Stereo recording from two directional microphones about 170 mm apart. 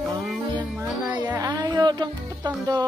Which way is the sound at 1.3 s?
20° right (ahead or behind).